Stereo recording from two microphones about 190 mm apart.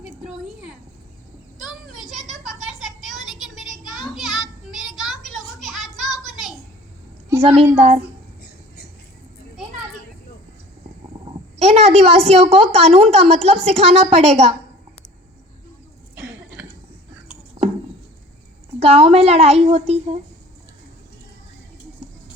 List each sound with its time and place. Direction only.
0.0 s a sound: 5° right (ahead or behind)
7.4 s a woman's voice: 30° right (ahead or behind)
8.4 s squawk: 55° left (ahead or behind)
11.6 s a sound: 35° right (ahead or behind)
12.3 s a woman's voice: 30° right (ahead or behind)
18.8 s a woman's voice: 30° right (ahead or behind)